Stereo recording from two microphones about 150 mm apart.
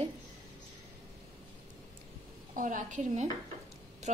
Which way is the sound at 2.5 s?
60° right (ahead or behind).